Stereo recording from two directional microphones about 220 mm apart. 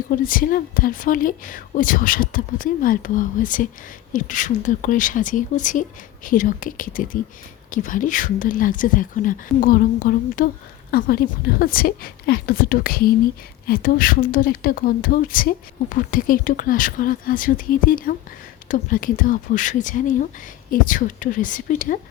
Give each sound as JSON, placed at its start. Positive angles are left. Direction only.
{"t": 0.1, "sound": "a woman's voice", "side_deg": 40}